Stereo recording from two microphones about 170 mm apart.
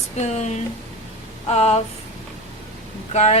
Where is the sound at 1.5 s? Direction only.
40° left (ahead or behind).